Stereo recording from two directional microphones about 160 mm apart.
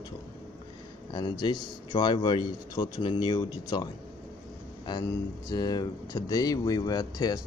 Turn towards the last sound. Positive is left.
turn(degrees=25)  # may be behind; listen again after turning